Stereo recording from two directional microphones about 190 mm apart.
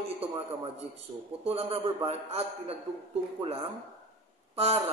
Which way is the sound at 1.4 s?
30° right (ahead or behind).